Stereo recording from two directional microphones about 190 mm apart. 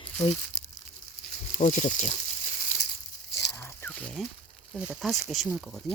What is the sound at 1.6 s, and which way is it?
Speech, 40° left (ahead or behind).